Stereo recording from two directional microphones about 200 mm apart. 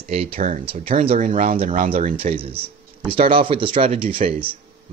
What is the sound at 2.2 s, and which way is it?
Speech, 30° right (ahead or behind).